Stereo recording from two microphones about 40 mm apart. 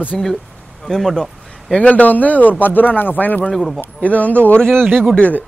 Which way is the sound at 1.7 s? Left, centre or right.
Left.